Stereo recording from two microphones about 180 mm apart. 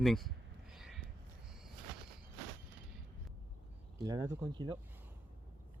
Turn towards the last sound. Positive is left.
turn(degrees=-25)  # may be behind; listen again after turning